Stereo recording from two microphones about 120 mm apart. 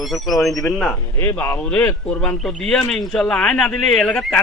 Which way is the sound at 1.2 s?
20° left (ahead or behind).